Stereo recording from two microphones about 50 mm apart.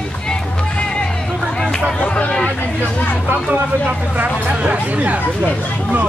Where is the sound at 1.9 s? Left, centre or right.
Left.